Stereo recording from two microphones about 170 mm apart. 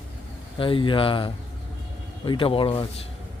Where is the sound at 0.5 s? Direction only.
30° left (ahead or behind).